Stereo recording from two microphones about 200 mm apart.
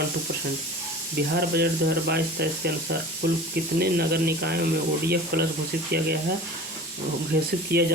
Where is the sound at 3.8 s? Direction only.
50° right (ahead or behind).